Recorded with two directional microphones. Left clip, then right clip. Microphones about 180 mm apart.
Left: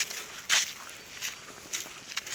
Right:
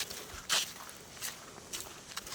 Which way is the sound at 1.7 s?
35° right (ahead or behind).